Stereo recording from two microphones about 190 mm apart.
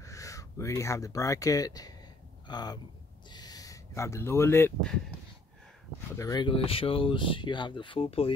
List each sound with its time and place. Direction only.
0.0 s speech: 15° left (ahead or behind)
6.1 s speech: 20° left (ahead or behind)